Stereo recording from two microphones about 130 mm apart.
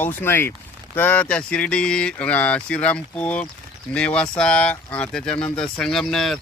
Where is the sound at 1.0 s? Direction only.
15° left (ahead or behind).